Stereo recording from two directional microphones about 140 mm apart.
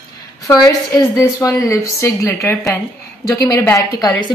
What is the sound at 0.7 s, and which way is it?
A woman's voice, 20° left (ahead or behind).